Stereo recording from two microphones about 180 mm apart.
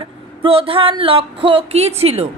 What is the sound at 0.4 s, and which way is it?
A woman's voice, 30° right (ahead or behind).